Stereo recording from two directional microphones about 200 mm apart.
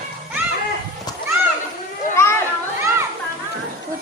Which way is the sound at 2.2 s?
15° left (ahead or behind).